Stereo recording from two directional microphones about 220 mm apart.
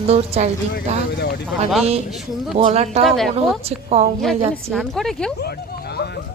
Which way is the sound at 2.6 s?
30° right (ahead or behind).